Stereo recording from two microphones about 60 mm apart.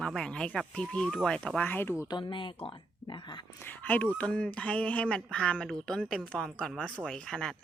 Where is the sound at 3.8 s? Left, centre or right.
Left.